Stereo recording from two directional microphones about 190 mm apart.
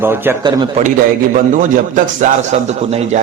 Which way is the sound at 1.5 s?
45° right (ahead or behind).